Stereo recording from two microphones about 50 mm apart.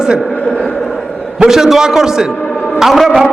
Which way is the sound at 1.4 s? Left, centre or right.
Centre.